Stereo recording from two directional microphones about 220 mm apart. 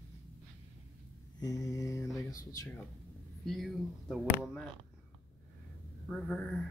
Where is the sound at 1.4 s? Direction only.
15° left (ahead or behind).